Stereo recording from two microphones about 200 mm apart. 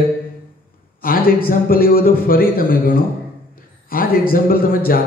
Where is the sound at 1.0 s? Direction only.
45° left (ahead or behind).